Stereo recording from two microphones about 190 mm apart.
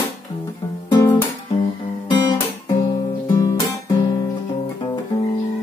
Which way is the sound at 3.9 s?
25° left (ahead or behind).